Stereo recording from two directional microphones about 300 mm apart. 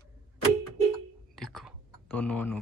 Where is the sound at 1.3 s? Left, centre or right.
Centre.